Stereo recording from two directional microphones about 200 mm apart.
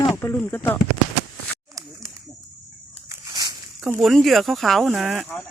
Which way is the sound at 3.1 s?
20° right (ahead or behind).